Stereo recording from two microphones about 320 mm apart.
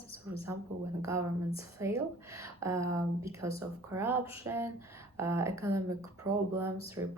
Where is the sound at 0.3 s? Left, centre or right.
Centre.